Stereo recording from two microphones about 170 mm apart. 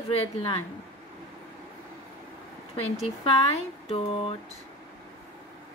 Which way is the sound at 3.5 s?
35° left (ahead or behind).